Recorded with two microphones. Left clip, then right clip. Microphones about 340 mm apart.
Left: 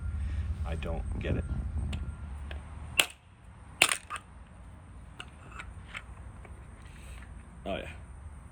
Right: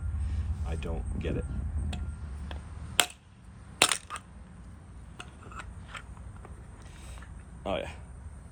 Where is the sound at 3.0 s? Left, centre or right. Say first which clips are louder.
Even; centre.